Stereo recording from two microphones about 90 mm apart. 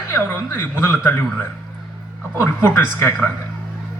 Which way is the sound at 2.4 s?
25° left (ahead or behind).